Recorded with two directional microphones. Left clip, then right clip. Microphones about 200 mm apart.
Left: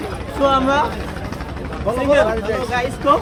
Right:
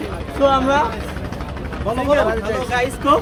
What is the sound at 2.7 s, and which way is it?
Speech, 55° right (ahead or behind).